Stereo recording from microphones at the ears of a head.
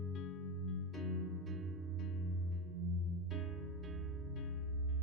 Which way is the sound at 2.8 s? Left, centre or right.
Right.